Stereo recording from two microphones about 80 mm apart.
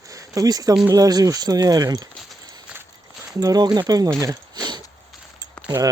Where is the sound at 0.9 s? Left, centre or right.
Right.